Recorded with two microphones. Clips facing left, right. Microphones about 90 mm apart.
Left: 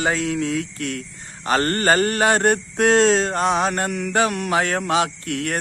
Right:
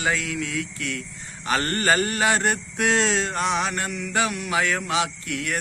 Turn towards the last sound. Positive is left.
turn(degrees=45)  # may be behind; listen again after turning